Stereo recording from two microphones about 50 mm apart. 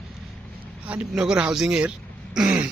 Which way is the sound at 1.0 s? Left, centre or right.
Centre.